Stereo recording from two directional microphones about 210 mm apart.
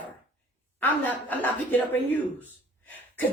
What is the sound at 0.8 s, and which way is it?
A man's voice, 10° left (ahead or behind).